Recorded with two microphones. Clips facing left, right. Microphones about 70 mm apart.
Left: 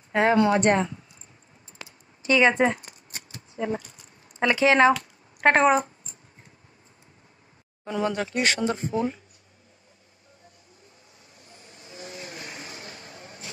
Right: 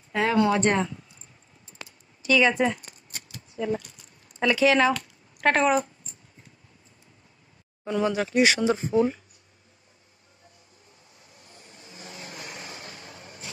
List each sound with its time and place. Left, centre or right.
0.1 s speech: left
2.2 s scissors: left
4.4 s speech: left
7.8 s speech: centre
11.3 s vehicle: left